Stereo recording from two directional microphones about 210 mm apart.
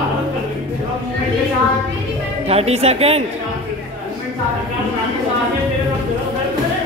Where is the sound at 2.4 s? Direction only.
30° right (ahead or behind).